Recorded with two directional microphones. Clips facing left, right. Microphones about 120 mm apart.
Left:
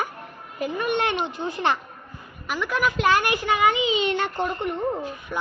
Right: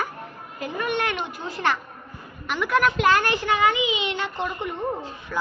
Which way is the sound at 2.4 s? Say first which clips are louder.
Right 3 dB; centre (ahead or behind).